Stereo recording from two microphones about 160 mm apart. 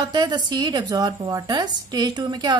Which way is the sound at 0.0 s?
25° right (ahead or behind).